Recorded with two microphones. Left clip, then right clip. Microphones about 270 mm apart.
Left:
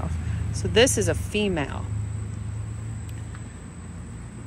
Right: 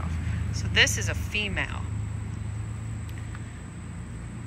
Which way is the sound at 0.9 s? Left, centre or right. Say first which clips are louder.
Left 6 dB; left.